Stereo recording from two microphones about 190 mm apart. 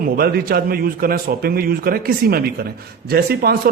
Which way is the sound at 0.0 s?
50° right (ahead or behind).